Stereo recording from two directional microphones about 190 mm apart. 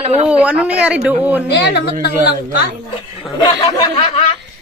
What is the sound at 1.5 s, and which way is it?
Speech, 60° left (ahead or behind).